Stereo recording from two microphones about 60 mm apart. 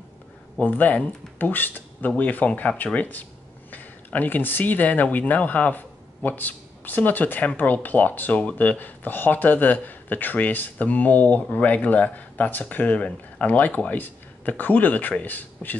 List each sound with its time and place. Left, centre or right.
0.6 s speech: left